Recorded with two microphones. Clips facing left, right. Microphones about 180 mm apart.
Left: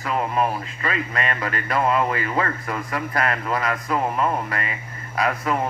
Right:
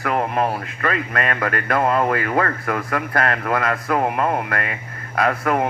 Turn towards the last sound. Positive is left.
turn(degrees=-55)  # may be behind; listen again after turning